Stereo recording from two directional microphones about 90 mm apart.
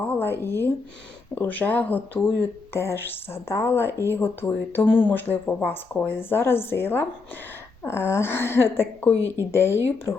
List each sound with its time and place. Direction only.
0.0 s a woman's voice: 20° left (ahead or behind)